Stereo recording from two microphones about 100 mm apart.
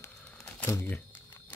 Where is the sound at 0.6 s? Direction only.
25° left (ahead or behind).